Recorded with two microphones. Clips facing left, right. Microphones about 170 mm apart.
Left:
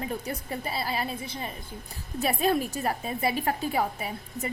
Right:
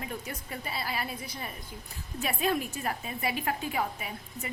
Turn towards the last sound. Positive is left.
turn(degrees=35)  # may be behind; listen again after turning